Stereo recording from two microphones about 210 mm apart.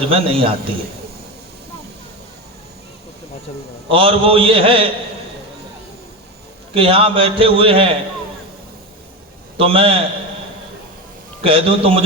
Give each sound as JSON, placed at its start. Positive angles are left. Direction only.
{"t": 0.1, "sound": "a man's voice", "side_deg": -25}
{"t": 3.8, "sound": "a man's voice", "side_deg": -25}
{"t": 6.7, "sound": "a man's voice", "side_deg": -25}
{"t": 9.6, "sound": "a man's voice", "side_deg": -25}
{"t": 11.4, "sound": "a man's voice", "side_deg": -25}